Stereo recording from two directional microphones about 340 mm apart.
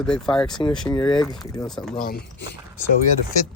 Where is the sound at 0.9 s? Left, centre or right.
Centre.